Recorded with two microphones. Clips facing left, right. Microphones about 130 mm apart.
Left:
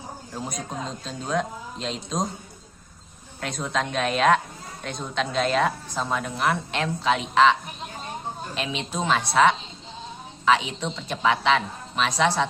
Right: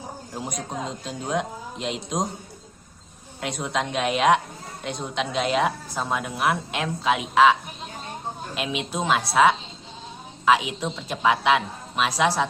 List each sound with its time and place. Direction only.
0.3 s a woman's voice: 15° right (ahead or behind)
3.4 s a woman's voice: 15° right (ahead or behind)
8.5 s a woman's voice: 5° right (ahead or behind)